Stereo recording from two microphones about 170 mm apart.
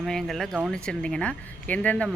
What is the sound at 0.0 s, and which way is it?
Speech, centre (ahead or behind).